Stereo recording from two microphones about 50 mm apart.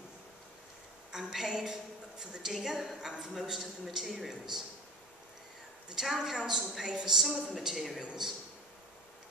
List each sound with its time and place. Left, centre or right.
1.1 s a woman's voice: centre
5.9 s a woman's voice: centre
8.0 s a woman's voice: centre